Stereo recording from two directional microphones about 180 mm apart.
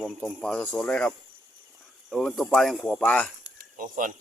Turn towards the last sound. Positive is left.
turn(degrees=-50)  # may be behind; listen again after turning